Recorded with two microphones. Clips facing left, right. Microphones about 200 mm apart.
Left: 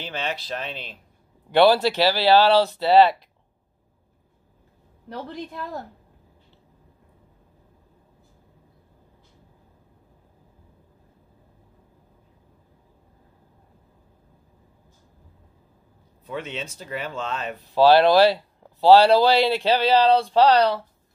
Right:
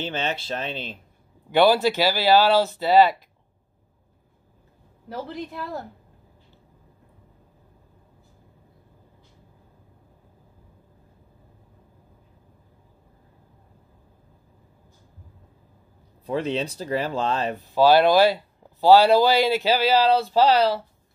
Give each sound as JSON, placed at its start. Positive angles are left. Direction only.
{"t": 0.0, "sound": "speech", "side_deg": -25}
{"t": 1.5, "sound": "speech", "side_deg": 0}
{"t": 5.1, "sound": "speech", "side_deg": -5}
{"t": 16.3, "sound": "speech", "side_deg": -35}
{"t": 17.6, "sound": "speech", "side_deg": 0}